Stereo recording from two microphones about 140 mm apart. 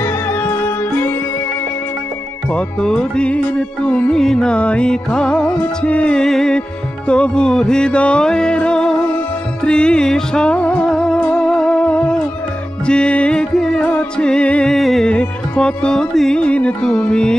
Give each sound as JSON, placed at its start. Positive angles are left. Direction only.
{"t": 0.0, "sound": "music", "side_deg": 15}
{"t": 2.5, "sound": "music", "side_deg": 5}